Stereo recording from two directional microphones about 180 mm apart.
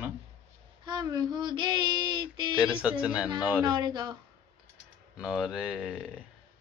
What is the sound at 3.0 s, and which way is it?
Speech, 5° right (ahead or behind).